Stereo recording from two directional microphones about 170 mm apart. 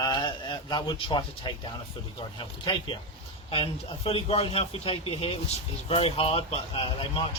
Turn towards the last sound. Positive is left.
turn(degrees=30)  # may be behind; listen again after turning